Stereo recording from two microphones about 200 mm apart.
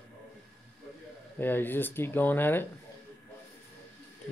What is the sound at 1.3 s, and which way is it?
Speech, 10° left (ahead or behind).